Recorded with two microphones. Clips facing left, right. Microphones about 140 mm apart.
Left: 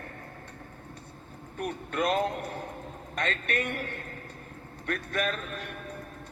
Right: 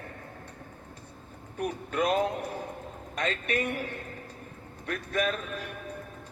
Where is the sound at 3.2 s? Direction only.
55° left (ahead or behind).